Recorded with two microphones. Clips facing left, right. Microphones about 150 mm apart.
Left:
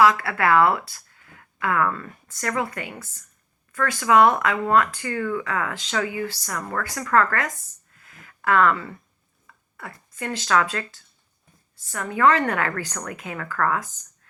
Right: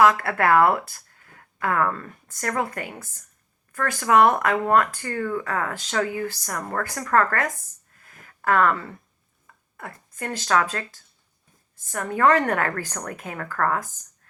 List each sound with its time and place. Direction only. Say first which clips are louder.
0.0 s speech: even; 50° right (ahead or behind)
8.0 s a sound: right 1 dB; 45° right (ahead or behind)
9.7 s speech: even; 45° right (ahead or behind)
12.1 s speech: even; 45° right (ahead or behind)